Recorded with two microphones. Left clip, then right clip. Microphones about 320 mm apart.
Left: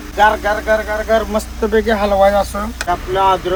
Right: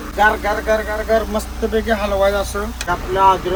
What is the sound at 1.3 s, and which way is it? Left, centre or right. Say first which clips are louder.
Speech: left 4 dB; left.